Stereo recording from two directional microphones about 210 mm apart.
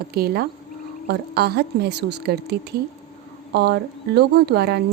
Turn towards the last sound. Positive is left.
turn(degrees=-50)  # may be behind; listen again after turning